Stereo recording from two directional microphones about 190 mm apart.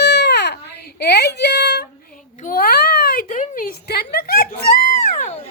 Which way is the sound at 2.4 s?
50° left (ahead or behind).